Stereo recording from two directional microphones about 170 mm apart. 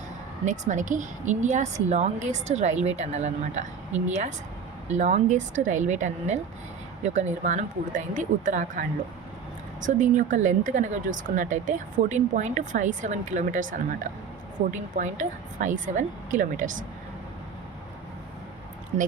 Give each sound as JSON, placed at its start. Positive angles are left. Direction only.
{"t": 0.4, "sound": "speech", "side_deg": -45}
{"t": 9.8, "sound": "speech", "side_deg": -45}